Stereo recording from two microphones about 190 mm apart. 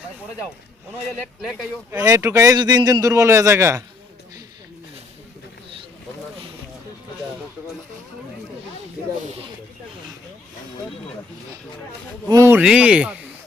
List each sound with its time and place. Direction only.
1.2 s speech: centre (ahead or behind)
1.9 s a man's voice: 15° right (ahead or behind)
12.3 s a man's voice: 15° right (ahead or behind)